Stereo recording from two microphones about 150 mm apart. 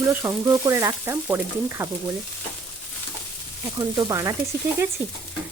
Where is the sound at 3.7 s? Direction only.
25° right (ahead or behind).